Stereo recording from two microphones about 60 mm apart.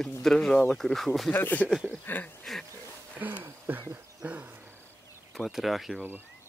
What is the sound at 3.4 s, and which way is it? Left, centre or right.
Speech, right.